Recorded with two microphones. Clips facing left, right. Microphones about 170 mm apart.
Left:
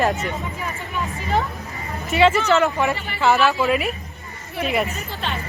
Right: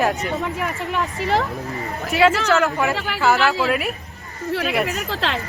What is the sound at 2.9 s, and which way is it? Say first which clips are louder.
Speech: right 2 dB; 90° right.